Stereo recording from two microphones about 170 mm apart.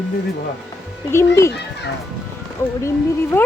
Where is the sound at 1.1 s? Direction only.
15° left (ahead or behind).